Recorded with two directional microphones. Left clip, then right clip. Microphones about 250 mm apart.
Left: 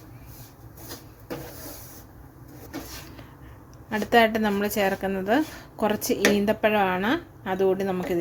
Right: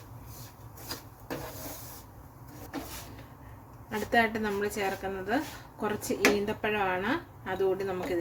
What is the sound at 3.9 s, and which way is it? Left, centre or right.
Speech, left.